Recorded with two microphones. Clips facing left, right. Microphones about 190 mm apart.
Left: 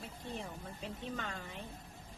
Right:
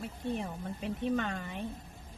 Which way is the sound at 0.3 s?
60° right (ahead or behind).